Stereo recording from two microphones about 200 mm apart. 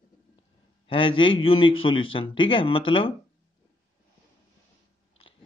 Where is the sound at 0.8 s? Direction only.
25° left (ahead or behind).